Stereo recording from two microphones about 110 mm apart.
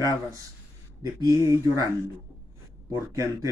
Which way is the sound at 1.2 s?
30° right (ahead or behind).